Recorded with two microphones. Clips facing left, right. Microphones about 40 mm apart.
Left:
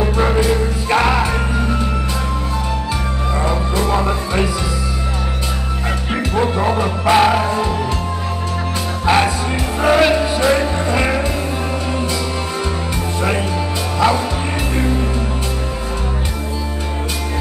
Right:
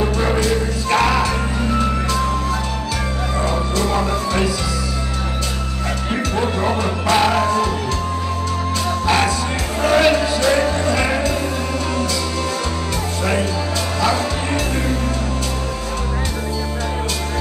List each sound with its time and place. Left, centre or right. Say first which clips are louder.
0.0 s music: left 2 dB; centre
3.4 s music: left 1 dB; centre
6.3 s music: left 4 dB; centre
9.0 s music: left 4 dB; centre
10.1 s music: left 1 dB; left
13.9 s music: left 4 dB; left